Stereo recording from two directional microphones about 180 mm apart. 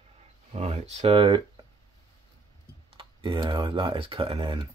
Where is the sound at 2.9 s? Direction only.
25° right (ahead or behind).